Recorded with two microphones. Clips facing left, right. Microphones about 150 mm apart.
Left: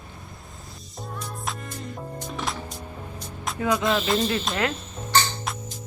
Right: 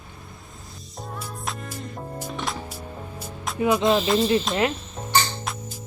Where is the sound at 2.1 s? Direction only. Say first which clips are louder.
Right 1 dB; 5° right (ahead or behind).